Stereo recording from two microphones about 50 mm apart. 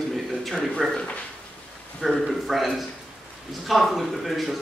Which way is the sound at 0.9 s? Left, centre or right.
Left.